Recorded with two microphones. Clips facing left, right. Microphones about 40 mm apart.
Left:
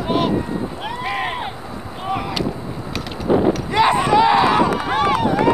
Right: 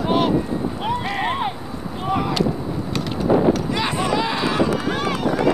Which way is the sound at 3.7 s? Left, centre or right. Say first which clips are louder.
Left 8 dB; left.